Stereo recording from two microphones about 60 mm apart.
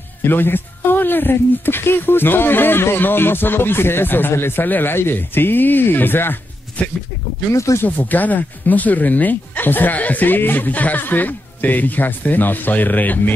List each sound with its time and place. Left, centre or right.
0.2 s speech: left
7.5 s speech: left
7.8 s speech: left